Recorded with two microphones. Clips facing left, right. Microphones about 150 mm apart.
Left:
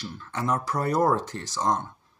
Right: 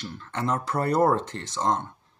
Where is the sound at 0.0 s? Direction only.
25° right (ahead or behind).